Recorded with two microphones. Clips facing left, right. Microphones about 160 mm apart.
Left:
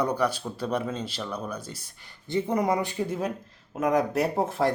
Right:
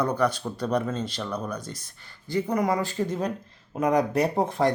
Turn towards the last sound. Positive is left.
turn(degrees=0)  # may be behind; listen again after turning